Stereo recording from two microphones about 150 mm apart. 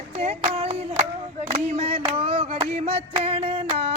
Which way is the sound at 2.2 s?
40° right (ahead or behind).